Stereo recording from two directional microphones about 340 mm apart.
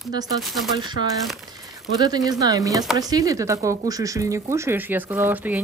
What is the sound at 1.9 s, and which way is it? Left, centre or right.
Speech, centre.